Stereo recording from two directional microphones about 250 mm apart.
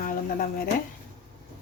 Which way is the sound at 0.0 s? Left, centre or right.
Left.